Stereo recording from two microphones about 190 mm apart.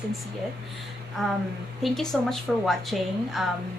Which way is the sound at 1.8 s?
Centre (ahead or behind).